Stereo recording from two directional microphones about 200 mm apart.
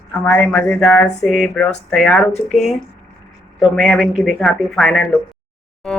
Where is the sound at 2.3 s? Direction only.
35° left (ahead or behind).